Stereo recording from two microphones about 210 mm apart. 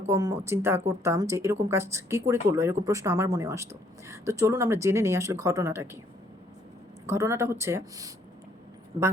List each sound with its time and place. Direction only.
0.1 s speech: 15° right (ahead or behind)
7.1 s speech: 10° right (ahead or behind)